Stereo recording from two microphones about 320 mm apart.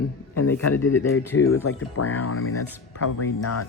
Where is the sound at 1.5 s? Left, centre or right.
Left.